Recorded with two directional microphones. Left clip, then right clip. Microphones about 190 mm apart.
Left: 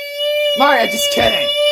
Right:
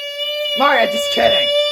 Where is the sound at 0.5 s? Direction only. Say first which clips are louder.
Right 2 dB; 25° left (ahead or behind).